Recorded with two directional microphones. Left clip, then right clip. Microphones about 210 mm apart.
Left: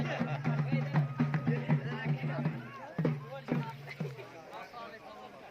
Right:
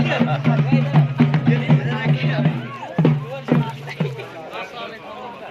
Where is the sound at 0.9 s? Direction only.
40° right (ahead or behind).